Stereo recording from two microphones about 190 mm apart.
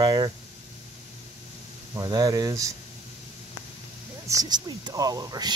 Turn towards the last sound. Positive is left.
turn(degrees=-20)  # may be behind; listen again after turning